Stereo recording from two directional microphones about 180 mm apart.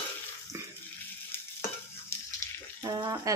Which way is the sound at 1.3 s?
10° left (ahead or behind).